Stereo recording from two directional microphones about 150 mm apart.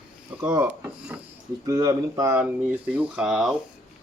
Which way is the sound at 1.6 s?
25° right (ahead or behind).